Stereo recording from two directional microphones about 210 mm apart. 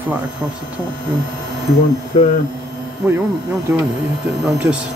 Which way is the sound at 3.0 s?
5° right (ahead or behind).